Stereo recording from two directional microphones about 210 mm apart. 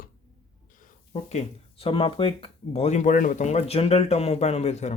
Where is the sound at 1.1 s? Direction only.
30° left (ahead or behind).